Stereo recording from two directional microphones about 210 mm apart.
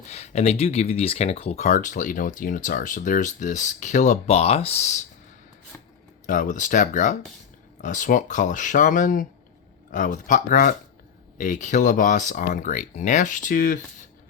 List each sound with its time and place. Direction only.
0.1 s speech: 30° left (ahead or behind)
6.2 s speech: 40° left (ahead or behind)